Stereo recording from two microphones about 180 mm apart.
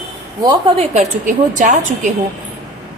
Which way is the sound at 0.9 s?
45° right (ahead or behind).